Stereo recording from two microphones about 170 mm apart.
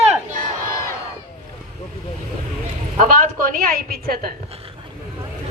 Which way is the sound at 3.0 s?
55° right (ahead or behind).